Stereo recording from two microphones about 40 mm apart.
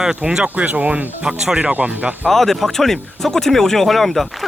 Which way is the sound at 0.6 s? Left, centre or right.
Right.